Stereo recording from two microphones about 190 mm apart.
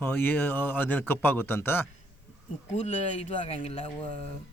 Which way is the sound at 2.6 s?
40° left (ahead or behind).